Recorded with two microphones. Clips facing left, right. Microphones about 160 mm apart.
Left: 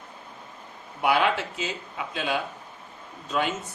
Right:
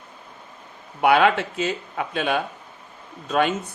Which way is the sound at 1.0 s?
60° right (ahead or behind).